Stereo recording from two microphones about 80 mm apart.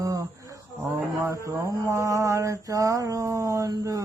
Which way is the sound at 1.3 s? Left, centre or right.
Right.